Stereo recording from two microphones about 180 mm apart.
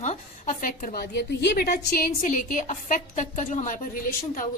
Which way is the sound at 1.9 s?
45° left (ahead or behind).